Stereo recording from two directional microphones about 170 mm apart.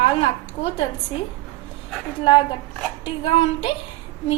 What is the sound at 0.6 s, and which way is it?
Speech, 50° left (ahead or behind).